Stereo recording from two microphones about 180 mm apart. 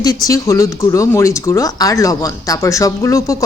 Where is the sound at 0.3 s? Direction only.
15° left (ahead or behind).